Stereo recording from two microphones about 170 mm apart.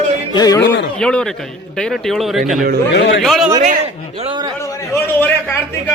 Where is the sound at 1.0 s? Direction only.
5° left (ahead or behind).